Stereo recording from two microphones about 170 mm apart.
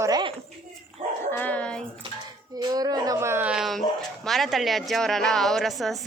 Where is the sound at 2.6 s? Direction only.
25° right (ahead or behind); by 6.0 s centre (ahead or behind).